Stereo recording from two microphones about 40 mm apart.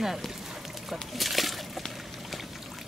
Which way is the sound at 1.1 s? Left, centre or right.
Centre.